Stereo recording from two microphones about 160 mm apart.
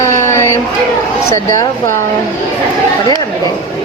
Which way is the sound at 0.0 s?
15° left (ahead or behind).